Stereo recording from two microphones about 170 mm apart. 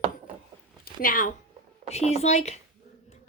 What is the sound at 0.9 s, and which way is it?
Speech, 55° left (ahead or behind).